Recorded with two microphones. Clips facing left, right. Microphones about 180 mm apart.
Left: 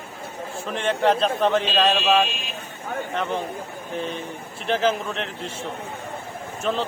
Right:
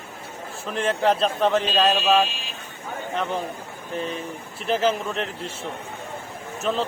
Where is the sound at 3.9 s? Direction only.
Centre (ahead or behind).